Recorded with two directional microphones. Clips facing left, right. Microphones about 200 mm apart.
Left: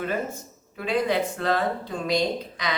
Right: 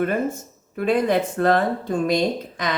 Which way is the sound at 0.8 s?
50° right (ahead or behind).